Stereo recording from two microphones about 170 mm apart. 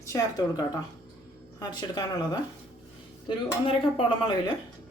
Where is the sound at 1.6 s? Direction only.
25° left (ahead or behind).